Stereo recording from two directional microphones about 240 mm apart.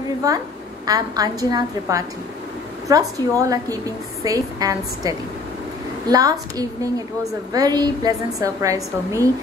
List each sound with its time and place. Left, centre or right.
0.2 s a woman's voice: centre